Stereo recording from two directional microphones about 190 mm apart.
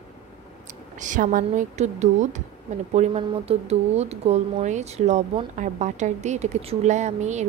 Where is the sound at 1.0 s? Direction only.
45° right (ahead or behind).